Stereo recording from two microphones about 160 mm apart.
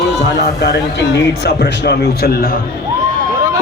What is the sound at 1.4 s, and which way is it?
A man's voice, 90° left.